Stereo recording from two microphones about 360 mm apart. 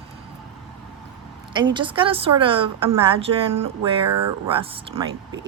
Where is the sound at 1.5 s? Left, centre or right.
Centre.